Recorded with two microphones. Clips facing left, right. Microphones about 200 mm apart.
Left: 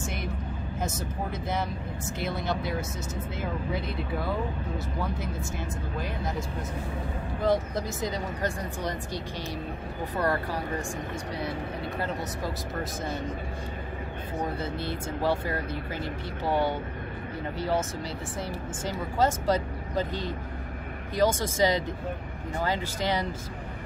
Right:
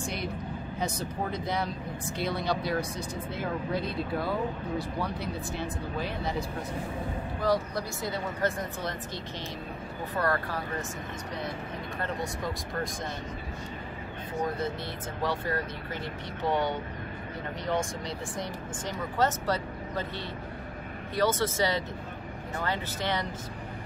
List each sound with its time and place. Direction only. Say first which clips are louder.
7.4 s speech: left 2 dB; 20° left (ahead or behind)
10.1 s speech: left 1 dB; 15° left (ahead or behind)
16.4 s speech: left 2 dB; 10° left (ahead or behind)
18.9 s speech: left 2 dB; 10° left (ahead or behind)
21.3 s speech: left 2 dB; 15° left (ahead or behind)